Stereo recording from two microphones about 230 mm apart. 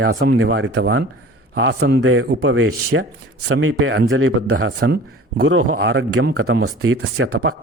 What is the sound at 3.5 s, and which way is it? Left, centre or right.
A man's voice, right.